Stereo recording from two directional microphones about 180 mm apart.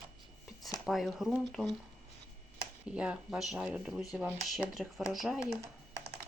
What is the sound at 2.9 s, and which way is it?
Speech, 5° right (ahead or behind).